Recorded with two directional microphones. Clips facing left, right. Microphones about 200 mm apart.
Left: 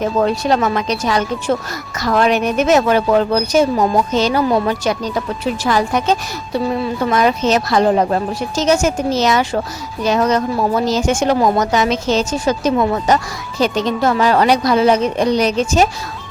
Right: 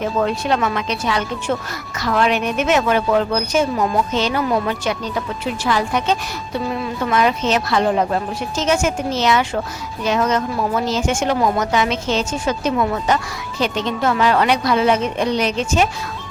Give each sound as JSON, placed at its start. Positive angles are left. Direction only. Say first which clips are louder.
{"t": 0.0, "sound": "speech", "louder": "left 4 dB", "side_deg": 35}